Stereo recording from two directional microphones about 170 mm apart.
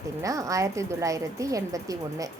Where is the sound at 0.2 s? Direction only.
20° right (ahead or behind).